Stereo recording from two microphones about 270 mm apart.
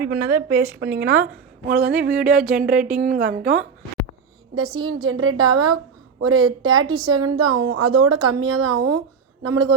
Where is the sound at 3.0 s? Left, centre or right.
Right.